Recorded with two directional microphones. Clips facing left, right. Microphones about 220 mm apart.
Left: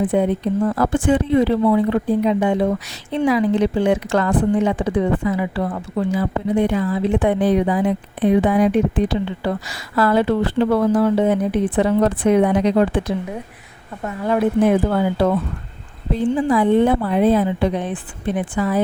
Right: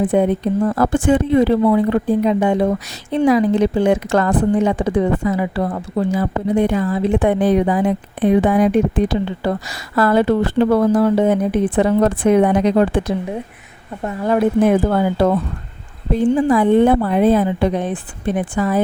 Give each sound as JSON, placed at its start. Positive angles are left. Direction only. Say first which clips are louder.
{"t": 0.1, "sound": "a woman's voice", "louder": "right 2 dB", "side_deg": -45}
{"t": 16.3, "sound": "a woman's voice", "louder": "right 2 dB", "side_deg": -50}